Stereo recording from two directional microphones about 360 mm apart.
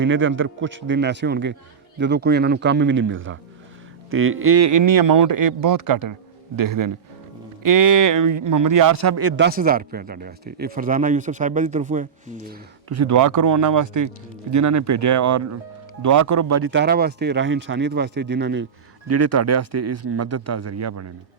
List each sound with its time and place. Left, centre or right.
0.0 s speech: right
12.9 s speech: right
19.0 s speech: right